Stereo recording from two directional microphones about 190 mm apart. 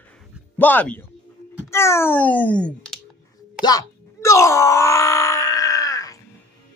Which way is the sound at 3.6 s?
20° left (ahead or behind).